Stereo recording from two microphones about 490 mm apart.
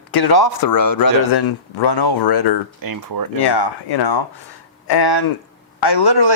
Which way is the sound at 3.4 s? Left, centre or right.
Left.